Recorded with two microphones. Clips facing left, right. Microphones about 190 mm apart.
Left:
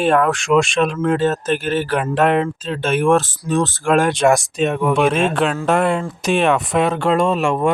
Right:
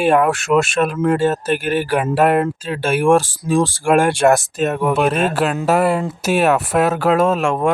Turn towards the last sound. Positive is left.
turn(degrees=0)  # may be behind; listen again after turning